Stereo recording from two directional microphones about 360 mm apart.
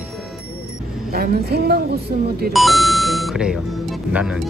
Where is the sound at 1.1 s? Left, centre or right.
Right.